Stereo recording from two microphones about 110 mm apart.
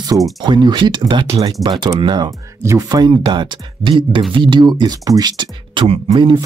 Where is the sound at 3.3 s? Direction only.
45° right (ahead or behind).